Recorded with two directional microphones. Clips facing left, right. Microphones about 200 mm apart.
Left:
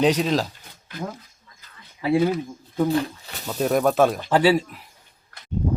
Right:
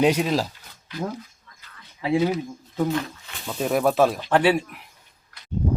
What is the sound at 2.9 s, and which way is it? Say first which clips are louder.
Speech: left 4 dB; 35° left (ahead or behind).